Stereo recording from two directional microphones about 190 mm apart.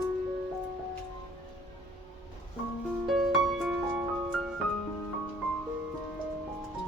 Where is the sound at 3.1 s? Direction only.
Centre (ahead or behind).